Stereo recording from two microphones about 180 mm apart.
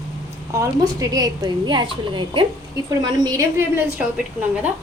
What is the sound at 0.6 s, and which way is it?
A woman's voice, 20° right (ahead or behind).